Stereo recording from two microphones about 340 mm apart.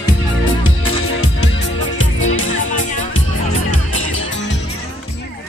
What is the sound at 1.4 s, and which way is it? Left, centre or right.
Music, left.